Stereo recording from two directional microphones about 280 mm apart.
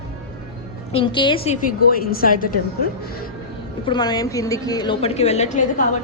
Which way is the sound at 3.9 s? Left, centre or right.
Centre.